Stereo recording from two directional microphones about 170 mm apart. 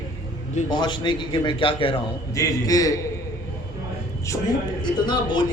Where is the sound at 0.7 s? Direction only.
25° left (ahead or behind).